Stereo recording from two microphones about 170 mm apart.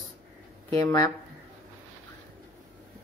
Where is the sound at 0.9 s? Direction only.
20° left (ahead or behind).